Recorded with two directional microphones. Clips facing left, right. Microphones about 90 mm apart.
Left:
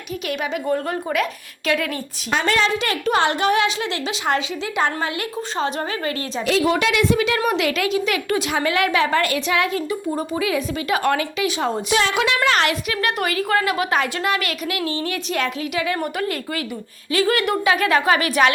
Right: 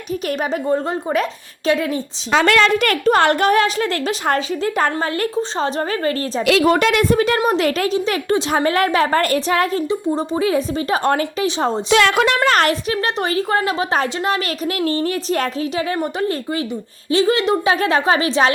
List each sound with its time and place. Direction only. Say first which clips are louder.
0.7 s a woman's voice: right 3 dB; 30° right (ahead or behind)
2.4 s a woman's voice: right 5 dB; 70° right (ahead or behind); by 6.4 s 35° right (ahead or behind)
6.4 s a woman's voice: right 4 dB; 80° right
6.7 s a woman's voice: right 4 dB; 50° right (ahead or behind)
7.3 s a woman's voice: right 3 dB; 35° right (ahead or behind)
11.9 s a woman's voice: right 7 dB; 65° right (ahead or behind)
12.1 s a woman's voice: right 4 dB; 45° right (ahead or behind)
12.9 s a woman's voice: right 3 dB; 30° right (ahead or behind)
17.1 s a woman's voice: right 4 dB; 25° right (ahead or behind)